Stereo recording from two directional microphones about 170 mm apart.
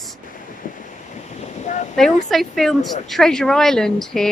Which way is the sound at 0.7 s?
50° left (ahead or behind).